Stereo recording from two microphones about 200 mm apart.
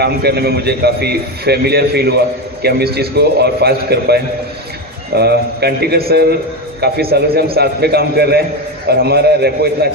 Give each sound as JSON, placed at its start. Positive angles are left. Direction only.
{"t": 0.0, "sound": "a man's voice", "side_deg": -55}